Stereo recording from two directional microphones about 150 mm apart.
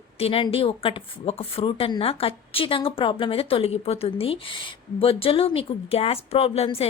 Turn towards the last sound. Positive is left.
turn(degrees=40)  # may be behind; listen again after turning